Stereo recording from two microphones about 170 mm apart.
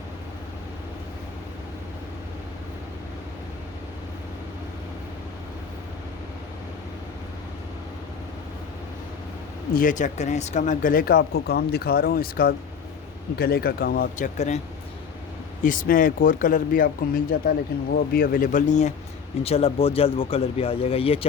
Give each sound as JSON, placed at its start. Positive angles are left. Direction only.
{"t": 9.7, "sound": "speech", "side_deg": 50}
{"t": 14.3, "sound": "speech", "side_deg": 40}
{"t": 15.6, "sound": "speech", "side_deg": 55}